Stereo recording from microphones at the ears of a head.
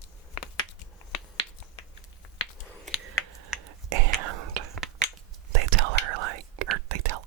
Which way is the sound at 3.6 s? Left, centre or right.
Right.